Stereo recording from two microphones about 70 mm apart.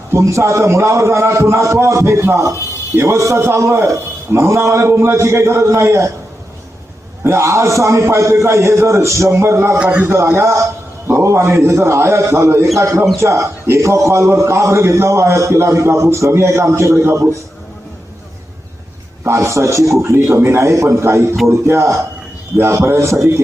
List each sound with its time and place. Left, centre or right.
0.1 s a man's voice: right
7.3 s a man's voice: right
9.7 s a man's voice: centre
10.2 s a man's voice: right
19.2 s a man's voice: right
20.1 s a man's voice: right